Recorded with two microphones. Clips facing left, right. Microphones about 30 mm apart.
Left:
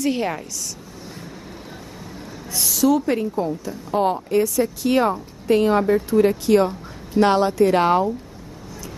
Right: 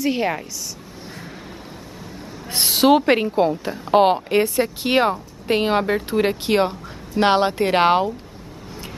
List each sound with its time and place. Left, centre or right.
0.0 s speech: centre
2.5 s a woman's voice: right